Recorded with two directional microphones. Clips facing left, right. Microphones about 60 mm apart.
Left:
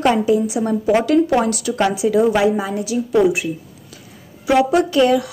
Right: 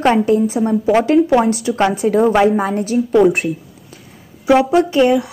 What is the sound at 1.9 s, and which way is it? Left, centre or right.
A woman's voice, right.